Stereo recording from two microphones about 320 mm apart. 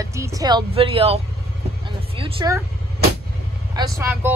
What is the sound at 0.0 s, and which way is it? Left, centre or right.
Speech, centre.